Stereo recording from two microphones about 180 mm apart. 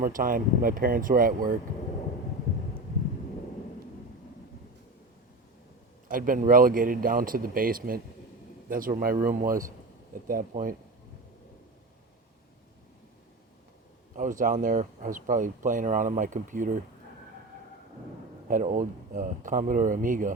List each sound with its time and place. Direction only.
0.0 s speech: 50° right (ahead or behind)
6.1 s speech: 50° right (ahead or behind)
14.2 s speech: 45° right (ahead or behind)
18.4 s speech: 45° right (ahead or behind)